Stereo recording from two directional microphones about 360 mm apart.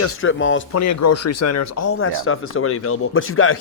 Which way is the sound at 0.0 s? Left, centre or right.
Left.